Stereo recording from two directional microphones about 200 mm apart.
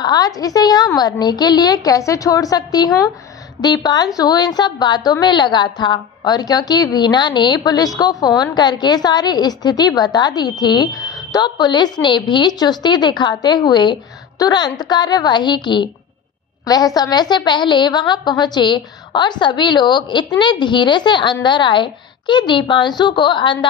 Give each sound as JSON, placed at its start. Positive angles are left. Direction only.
{"t": 0.0, "sound": "a woman's voice", "side_deg": 20}